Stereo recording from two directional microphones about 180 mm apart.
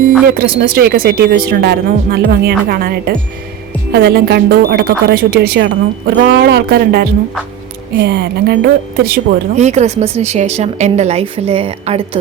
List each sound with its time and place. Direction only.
0.3 s speech: 55° right (ahead or behind)
9.6 s speech: 40° right (ahead or behind)